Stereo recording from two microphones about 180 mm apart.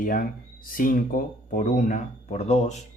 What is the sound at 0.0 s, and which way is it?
Speech, 50° left (ahead or behind).